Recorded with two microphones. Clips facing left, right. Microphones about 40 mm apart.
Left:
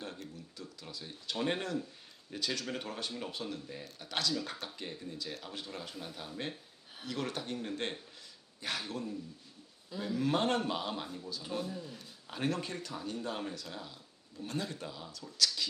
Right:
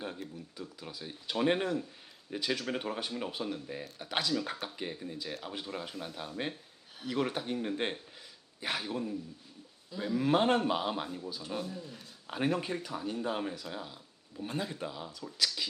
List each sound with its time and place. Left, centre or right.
0.0 s speech: centre
11.5 s a man's voice: centre
12.3 s speech: centre